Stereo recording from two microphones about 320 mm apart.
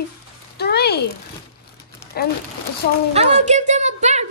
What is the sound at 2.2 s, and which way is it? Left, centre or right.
Speech, left.